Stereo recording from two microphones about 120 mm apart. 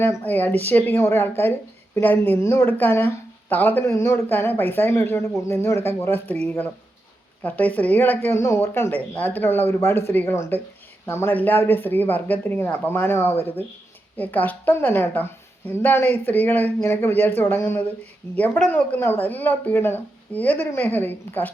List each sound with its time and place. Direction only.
0.0 s speech: 15° left (ahead or behind)
7.4 s speech: 10° left (ahead or behind)